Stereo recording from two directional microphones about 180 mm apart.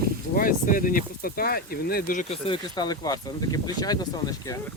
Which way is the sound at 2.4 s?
25° left (ahead or behind).